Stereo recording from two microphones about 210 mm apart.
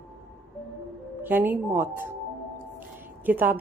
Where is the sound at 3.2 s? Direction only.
10° right (ahead or behind).